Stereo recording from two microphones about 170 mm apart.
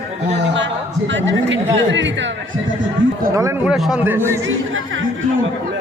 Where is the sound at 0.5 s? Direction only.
90° right.